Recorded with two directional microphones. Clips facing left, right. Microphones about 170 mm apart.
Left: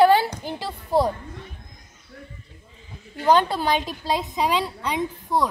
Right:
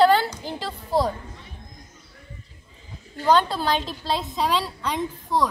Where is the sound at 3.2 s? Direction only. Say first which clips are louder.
Left 1 dB; 15° left (ahead or behind).